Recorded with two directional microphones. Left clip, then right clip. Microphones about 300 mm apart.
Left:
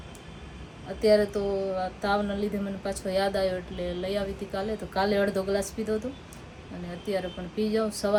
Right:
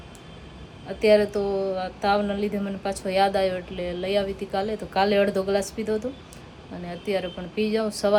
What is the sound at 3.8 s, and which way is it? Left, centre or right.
Speech, right.